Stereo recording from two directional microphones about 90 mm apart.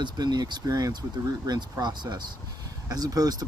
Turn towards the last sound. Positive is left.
turn(degrees=-45)  # may be behind; listen again after turning